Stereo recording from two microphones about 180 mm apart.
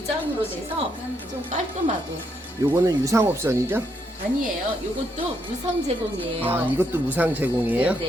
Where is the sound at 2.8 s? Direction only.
15° right (ahead or behind).